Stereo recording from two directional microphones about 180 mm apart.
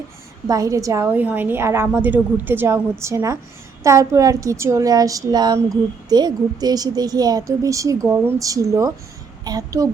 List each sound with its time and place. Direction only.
0.4 s a woman's voice: 20° right (ahead or behind)